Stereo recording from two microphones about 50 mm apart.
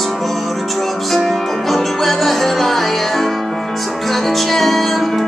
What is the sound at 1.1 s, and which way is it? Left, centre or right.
Music, centre.